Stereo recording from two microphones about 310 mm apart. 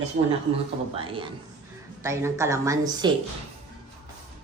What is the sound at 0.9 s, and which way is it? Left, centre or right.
A woman's voice, centre.